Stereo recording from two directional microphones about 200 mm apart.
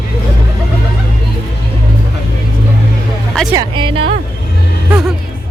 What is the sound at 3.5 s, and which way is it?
Speech, 25° right (ahead or behind).